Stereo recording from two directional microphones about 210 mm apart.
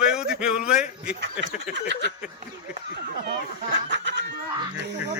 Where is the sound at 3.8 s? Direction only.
55° right (ahead or behind).